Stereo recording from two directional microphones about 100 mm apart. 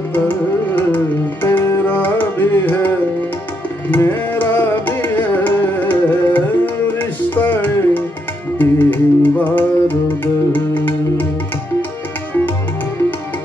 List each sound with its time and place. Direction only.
0.7 s music: 20° left (ahead or behind)
3.9 s carnatic music: 20° left (ahead or behind)
8.5 s music: 20° left (ahead or behind)